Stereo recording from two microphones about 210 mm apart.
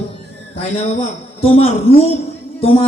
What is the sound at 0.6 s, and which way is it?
Speech, 30° left (ahead or behind).